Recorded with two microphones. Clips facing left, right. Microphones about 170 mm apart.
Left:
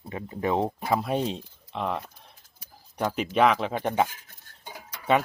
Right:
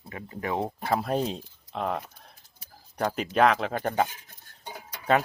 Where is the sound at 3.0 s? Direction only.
Centre (ahead or behind).